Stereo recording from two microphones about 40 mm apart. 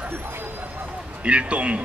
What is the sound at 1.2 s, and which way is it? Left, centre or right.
Speech, right.